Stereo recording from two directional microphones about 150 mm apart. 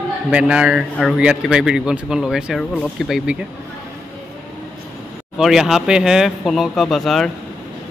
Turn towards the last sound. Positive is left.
turn(degrees=0)  # may be behind; listen again after turning